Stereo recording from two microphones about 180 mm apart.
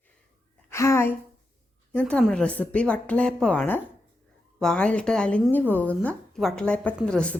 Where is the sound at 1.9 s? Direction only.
5° left (ahead or behind).